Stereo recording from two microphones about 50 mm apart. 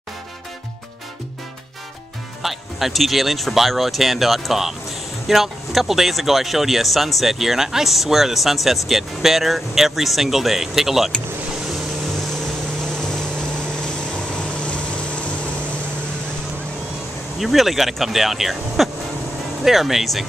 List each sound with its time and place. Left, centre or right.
2.4 s speech: centre
12.8 s vehicle: centre
17.4 s speech: centre